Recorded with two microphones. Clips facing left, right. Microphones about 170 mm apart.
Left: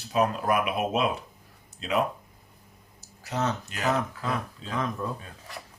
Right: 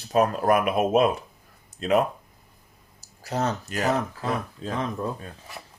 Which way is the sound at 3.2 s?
35° right (ahead or behind).